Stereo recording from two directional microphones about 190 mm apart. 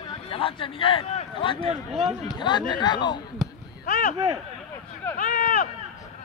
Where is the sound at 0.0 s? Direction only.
30° left (ahead or behind).